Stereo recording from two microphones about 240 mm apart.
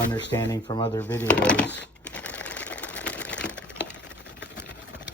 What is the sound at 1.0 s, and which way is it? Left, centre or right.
Speech, centre.